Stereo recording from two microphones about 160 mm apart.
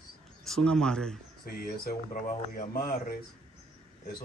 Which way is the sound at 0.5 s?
5° left (ahead or behind).